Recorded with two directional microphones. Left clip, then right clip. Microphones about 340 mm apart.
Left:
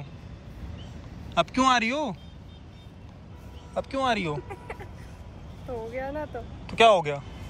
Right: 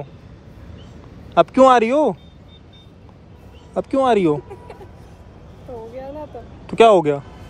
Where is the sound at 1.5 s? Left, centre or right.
Centre.